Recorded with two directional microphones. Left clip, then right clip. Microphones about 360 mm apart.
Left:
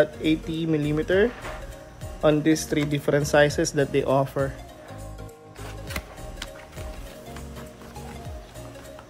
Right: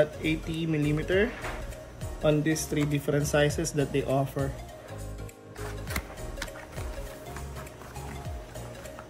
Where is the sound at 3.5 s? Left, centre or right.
Centre.